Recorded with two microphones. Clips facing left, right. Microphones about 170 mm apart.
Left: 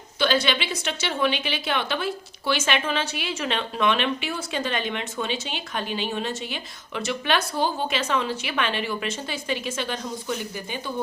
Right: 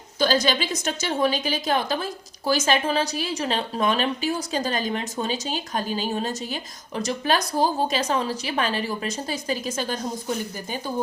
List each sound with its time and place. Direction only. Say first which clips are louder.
0.2 s a woman's voice: right 1 dB; 40° right (ahead or behind)